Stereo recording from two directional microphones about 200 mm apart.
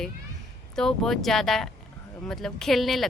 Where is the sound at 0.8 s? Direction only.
Centre (ahead or behind).